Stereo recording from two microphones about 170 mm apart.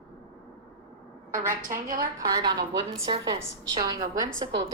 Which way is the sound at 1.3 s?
50° right (ahead or behind).